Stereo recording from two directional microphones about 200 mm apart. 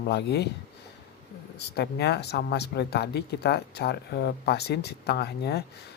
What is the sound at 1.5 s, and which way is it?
Speech, 55° left (ahead or behind).